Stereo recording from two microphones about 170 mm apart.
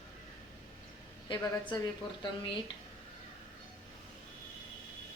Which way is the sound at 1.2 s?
25° left (ahead or behind).